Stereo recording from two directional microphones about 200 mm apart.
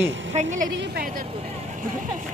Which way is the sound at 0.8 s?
50° right (ahead or behind).